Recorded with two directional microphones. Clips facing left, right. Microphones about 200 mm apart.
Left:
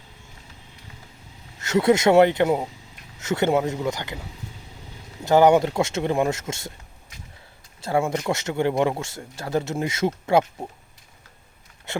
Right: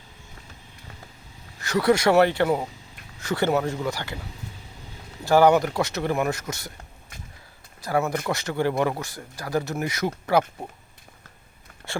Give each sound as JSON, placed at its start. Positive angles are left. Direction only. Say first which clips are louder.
{"t": 1.5, "sound": "speech", "louder": "left 2 dB", "side_deg": 25}
{"t": 5.2, "sound": "speech", "louder": "left 1 dB", "side_deg": 20}
{"t": 7.8, "sound": "speech", "louder": "left 2 dB", "side_deg": 25}